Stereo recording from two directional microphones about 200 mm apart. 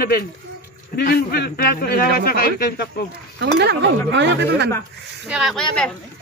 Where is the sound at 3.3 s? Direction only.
55° right (ahead or behind).